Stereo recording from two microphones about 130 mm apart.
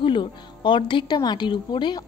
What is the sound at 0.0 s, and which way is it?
A woman's voice, 40° left (ahead or behind).